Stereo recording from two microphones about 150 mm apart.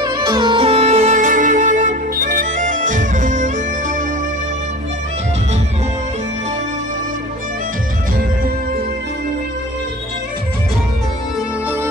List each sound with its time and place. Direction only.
0.0 s music: 30° right (ahead or behind); by 3.5 s 60° right (ahead or behind)